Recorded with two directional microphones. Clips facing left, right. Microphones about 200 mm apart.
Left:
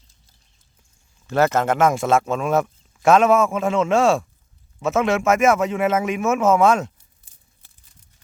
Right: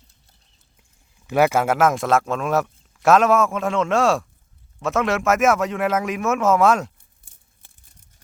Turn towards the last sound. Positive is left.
turn(degrees=-50)  # may be behind; listen again after turning